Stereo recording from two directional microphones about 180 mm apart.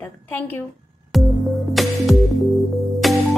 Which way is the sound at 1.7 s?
Centre (ahead or behind).